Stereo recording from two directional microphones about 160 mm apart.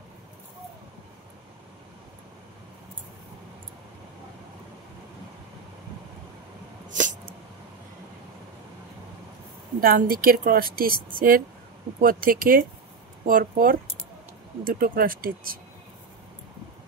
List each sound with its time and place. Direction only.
6.9 s dog: 50° right (ahead or behind)
9.8 s speech: 65° right (ahead or behind)